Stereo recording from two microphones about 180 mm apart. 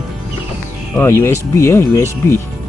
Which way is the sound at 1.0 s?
15° left (ahead or behind).